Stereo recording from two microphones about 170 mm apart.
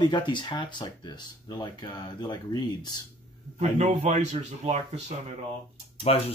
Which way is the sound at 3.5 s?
40° right (ahead or behind).